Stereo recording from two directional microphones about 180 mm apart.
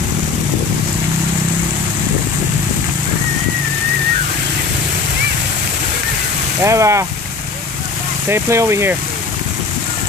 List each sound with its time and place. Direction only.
6.6 s speech: 15° right (ahead or behind)
8.3 s speech: 15° right (ahead or behind)